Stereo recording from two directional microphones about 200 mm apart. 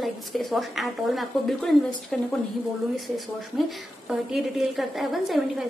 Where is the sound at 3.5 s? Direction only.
Centre (ahead or behind).